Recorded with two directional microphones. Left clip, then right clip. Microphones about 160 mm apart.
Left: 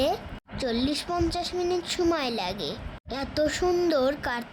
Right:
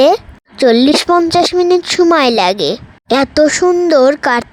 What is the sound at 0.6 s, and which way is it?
A woman's voice, 55° right (ahead or behind).